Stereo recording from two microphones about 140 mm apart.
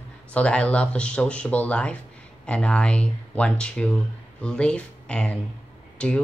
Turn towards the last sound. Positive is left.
turn(degrees=5)  # may be behind; listen again after turning